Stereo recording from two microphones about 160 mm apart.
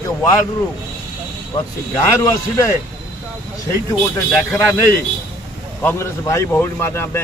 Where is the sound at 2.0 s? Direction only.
20° left (ahead or behind).